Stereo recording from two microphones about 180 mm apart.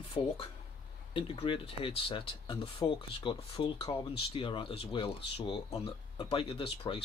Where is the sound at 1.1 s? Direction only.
30° left (ahead or behind).